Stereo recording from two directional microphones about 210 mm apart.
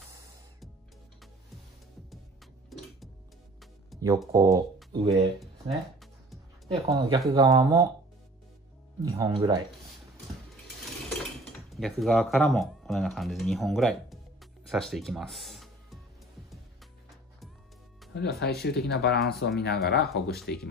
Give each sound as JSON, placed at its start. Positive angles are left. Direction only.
{"t": 3.9, "sound": "music", "side_deg": 0}
{"t": 4.3, "sound": "speech", "side_deg": -15}
{"t": 4.9, "sound": "speech", "side_deg": -30}
{"t": 5.4, "sound": "music", "side_deg": 0}
{"t": 6.9, "sound": "speech", "side_deg": -20}
{"t": 9.0, "sound": "speech", "side_deg": -20}
{"t": 11.7, "sound": "speech", "side_deg": 0}
{"t": 18.1, "sound": "speech", "side_deg": 50}